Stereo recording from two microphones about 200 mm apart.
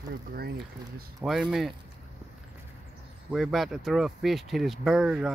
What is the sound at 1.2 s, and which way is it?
Speech, 10° right (ahead or behind).